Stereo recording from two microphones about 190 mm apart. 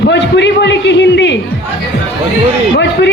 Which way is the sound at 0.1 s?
65° left (ahead or behind).